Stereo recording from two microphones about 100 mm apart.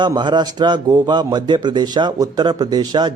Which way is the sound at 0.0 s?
50° right (ahead or behind).